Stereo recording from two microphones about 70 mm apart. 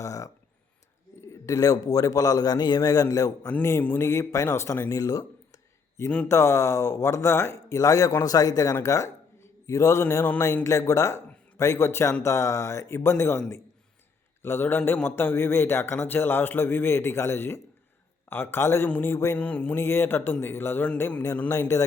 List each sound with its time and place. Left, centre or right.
0.0 s a sound: left
1.3 s a man's voice: left
3.6 s a man's voice: left
6.2 s a man's voice: left
8.7 s a man's voice: left
14.4 s a man's voice: left
19.4 s a man's voice: left